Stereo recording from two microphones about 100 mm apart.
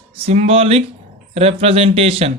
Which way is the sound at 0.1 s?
80° right.